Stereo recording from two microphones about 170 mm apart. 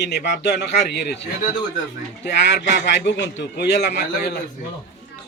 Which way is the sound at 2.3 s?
90° left.